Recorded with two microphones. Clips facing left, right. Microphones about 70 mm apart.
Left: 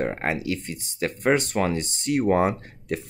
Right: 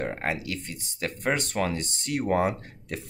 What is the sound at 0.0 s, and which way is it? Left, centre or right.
Speech, left.